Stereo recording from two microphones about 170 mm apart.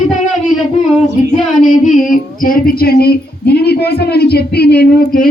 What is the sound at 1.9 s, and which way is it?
Speech, 50° left (ahead or behind).